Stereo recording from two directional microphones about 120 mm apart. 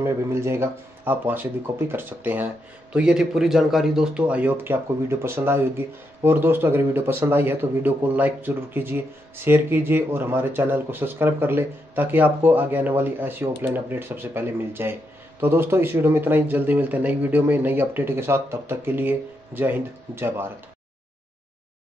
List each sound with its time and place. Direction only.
0.0 s speech: 20° right (ahead or behind)